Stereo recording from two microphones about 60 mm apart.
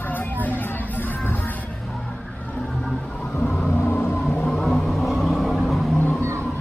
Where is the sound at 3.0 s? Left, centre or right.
Centre.